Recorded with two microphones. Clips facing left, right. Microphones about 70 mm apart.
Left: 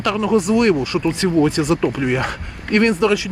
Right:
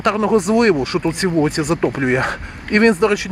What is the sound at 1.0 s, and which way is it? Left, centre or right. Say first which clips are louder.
Speech: left 2 dB; right.